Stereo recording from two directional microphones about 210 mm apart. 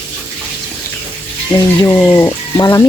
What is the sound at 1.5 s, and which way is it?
Speech, 15° left (ahead or behind).